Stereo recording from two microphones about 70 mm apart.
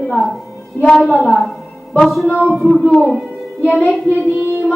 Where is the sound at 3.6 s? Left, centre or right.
Centre.